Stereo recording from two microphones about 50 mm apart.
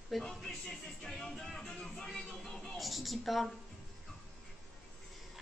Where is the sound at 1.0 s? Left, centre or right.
Centre.